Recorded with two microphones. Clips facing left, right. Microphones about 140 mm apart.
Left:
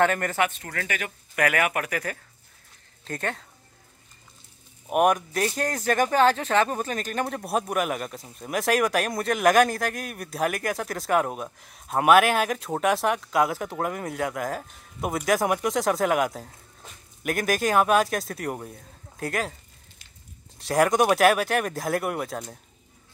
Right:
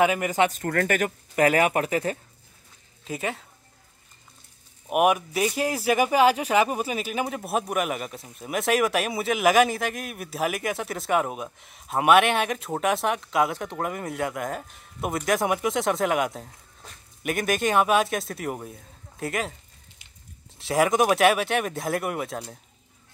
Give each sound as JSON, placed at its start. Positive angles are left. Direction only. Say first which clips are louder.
{"t": 0.0, "sound": "speech", "louder": "right 1 dB", "side_deg": -10}
{"t": 0.5, "sound": "speech", "louder": "right 8 dB", "side_deg": -45}
{"t": 1.3, "sound": "speech", "louder": "right 3 dB", "side_deg": -30}
{"t": 3.0, "sound": "speech", "louder": "right 1 dB", "side_deg": -5}
{"t": 4.8, "sound": "speech", "louder": "even", "side_deg": -5}
{"t": 20.5, "sound": "speech", "louder": "even", "side_deg": 0}